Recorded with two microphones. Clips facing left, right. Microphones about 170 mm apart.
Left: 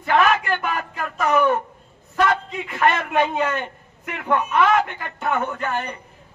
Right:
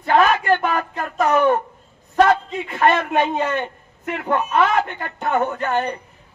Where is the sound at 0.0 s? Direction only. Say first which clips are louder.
Right 2 dB; 35° right (ahead or behind).